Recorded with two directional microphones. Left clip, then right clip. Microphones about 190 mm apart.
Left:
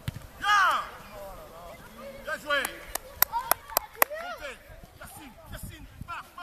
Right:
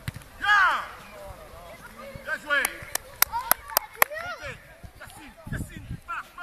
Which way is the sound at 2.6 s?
25° right (ahead or behind).